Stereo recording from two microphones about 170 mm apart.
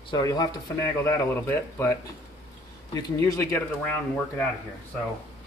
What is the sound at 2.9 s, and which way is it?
Speech, 20° left (ahead or behind).